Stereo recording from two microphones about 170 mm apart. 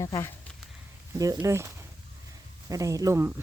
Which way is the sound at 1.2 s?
20° right (ahead or behind).